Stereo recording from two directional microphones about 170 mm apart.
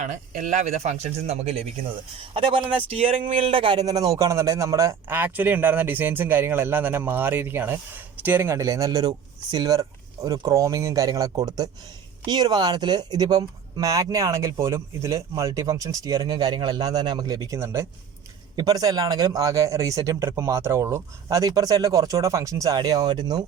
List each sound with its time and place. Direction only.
0.0 s speech: 45° right (ahead or behind); by 23.4 s 25° right (ahead or behind)